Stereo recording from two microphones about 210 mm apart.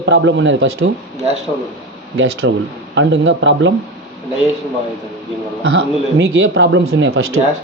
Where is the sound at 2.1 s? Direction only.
65° right (ahead or behind).